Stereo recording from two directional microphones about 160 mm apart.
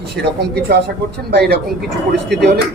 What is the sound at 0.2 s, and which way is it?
A woman's voice, 90° right.